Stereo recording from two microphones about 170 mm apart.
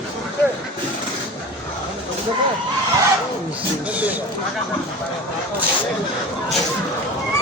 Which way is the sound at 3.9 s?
10° right (ahead or behind).